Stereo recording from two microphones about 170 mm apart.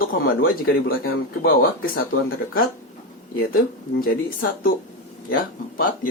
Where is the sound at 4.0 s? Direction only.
60° left (ahead or behind).